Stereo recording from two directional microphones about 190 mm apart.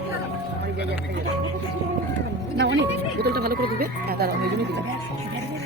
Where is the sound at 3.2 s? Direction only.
55° right (ahead or behind).